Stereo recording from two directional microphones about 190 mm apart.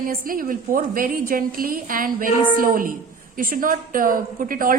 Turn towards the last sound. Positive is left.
turn(degrees=-45)  # may be behind; listen again after turning